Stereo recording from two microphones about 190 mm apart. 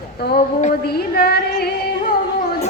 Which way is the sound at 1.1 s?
55° left (ahead or behind).